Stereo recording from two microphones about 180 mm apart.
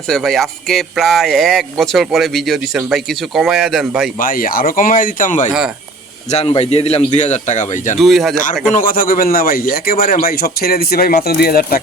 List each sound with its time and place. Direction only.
0.1 s speech: centre (ahead or behind)
4.2 s speech: 50° left (ahead or behind)
5.5 s speech: 5° right (ahead or behind)
6.3 s a man's voice: 35° left (ahead or behind)
7.9 s speech: centre (ahead or behind)
8.7 s a man's voice: 50° left (ahead or behind)